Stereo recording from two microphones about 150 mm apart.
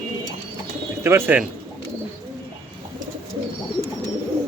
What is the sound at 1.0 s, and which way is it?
Speech, 15° right (ahead or behind).